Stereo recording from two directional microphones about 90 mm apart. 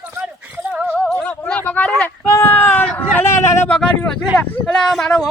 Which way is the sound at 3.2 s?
30° left (ahead or behind).